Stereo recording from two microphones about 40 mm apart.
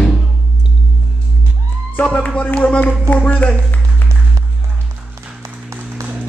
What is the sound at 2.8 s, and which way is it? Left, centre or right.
Speech, left.